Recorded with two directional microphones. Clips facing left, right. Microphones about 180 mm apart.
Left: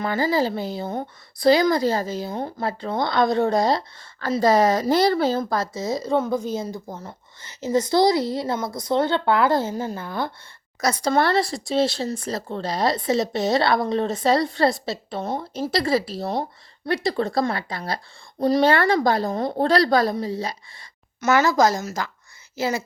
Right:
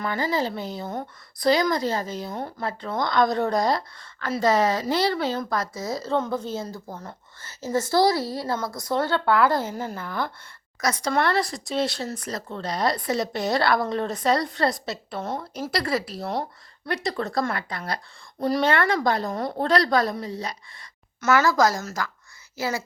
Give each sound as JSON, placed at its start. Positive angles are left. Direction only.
{"t": 0.0, "sound": "speech", "side_deg": 30}
{"t": 5.4, "sound": "speech", "side_deg": 25}
{"t": 6.9, "sound": "speech", "side_deg": 5}
{"t": 7.4, "sound": "speech", "side_deg": 20}
{"t": 18.6, "sound": "speech", "side_deg": 35}